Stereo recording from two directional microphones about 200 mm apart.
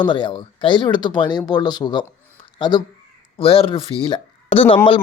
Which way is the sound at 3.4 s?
30° left (ahead or behind).